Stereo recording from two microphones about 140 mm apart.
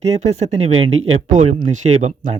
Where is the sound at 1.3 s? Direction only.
65° right (ahead or behind).